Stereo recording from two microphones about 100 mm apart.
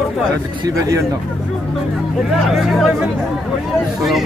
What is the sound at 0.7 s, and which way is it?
Speech, 30° right (ahead or behind).